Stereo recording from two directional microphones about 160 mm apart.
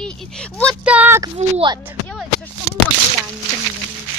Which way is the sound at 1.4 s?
35° right (ahead or behind).